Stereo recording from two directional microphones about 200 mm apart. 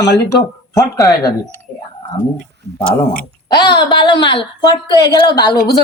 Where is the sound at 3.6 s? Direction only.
20° left (ahead or behind).